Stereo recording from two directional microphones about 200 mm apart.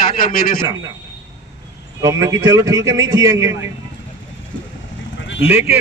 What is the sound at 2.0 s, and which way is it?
A man's voice, 15° right (ahead or behind).